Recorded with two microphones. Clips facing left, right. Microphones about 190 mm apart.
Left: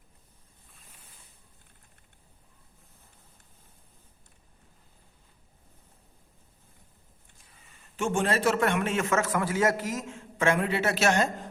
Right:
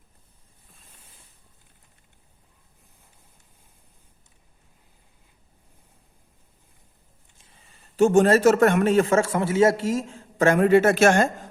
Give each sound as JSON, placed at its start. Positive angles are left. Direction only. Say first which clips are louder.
{"t": 7.9, "sound": "a man's voice", "louder": "right 11 dB", "side_deg": -40}